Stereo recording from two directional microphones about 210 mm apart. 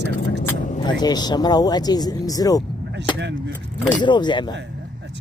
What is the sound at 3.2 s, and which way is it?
Speech, 55° right (ahead or behind).